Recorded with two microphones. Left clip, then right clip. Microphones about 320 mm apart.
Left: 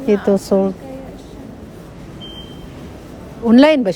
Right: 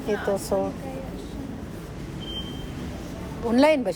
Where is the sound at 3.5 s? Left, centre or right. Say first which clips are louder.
Left 8 dB; left.